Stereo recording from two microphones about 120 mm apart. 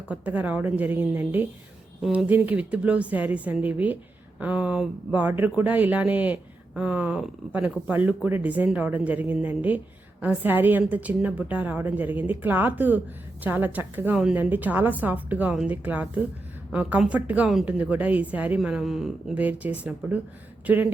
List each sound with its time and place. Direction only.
0.1 s speech: 10° right (ahead or behind)
19.4 s speech: 15° right (ahead or behind)